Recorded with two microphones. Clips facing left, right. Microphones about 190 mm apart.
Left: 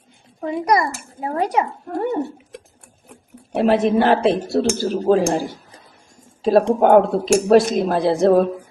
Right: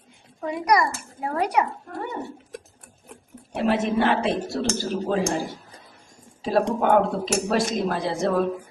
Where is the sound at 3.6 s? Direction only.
35° left (ahead or behind).